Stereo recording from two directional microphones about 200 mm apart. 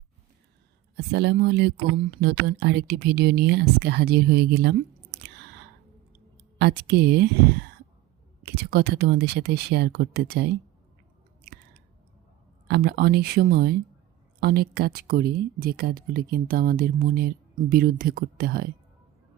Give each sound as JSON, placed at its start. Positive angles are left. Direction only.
{"t": 0.9, "sound": "speech", "side_deg": -55}
{"t": 6.6, "sound": "speech", "side_deg": -55}
{"t": 12.6, "sound": "speech", "side_deg": -55}